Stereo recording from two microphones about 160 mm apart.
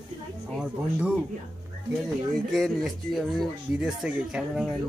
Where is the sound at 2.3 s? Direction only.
Centre (ahead or behind).